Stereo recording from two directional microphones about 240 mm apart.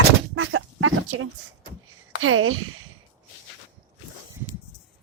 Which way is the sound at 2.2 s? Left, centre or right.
Right.